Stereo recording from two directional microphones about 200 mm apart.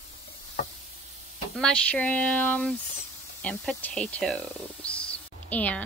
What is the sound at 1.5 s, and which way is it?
Speech, 5° left (ahead or behind).